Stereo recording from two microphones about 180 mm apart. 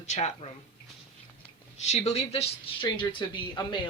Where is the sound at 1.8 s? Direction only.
35° left (ahead or behind).